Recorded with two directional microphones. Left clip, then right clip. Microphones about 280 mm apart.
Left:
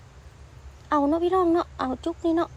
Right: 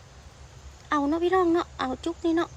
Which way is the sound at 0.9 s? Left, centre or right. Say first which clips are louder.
Left 2 dB; centre.